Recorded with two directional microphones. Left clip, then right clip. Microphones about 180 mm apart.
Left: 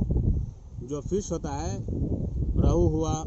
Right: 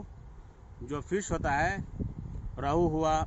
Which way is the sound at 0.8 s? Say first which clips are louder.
Left 3 dB; 40° right (ahead or behind).